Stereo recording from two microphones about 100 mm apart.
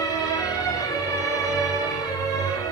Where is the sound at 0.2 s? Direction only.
35° left (ahead or behind).